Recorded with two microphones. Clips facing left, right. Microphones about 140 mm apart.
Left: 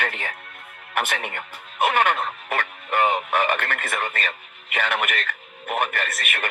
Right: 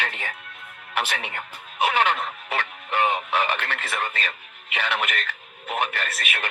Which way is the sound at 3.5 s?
55° left (ahead or behind).